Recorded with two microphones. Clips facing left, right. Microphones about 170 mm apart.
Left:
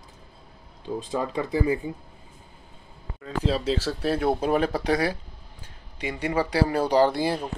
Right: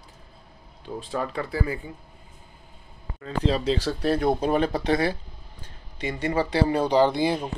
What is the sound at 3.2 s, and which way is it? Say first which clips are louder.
Speech: right 1 dB; 5° left (ahead or behind).